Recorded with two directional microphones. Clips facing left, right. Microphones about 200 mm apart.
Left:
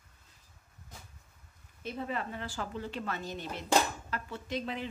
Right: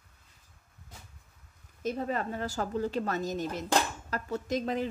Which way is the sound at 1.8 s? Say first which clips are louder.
Right 5 dB; 40° right (ahead or behind).